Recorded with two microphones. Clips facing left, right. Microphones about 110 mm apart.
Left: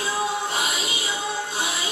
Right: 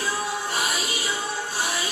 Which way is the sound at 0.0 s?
20° left (ahead or behind).